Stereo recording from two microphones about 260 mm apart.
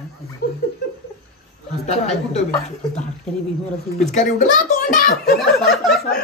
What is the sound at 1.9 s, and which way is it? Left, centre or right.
Speech, left.